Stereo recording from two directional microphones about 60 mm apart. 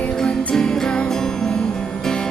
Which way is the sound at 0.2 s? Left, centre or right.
Centre.